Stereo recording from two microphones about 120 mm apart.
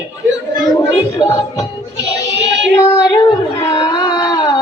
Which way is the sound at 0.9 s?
35° left (ahead or behind).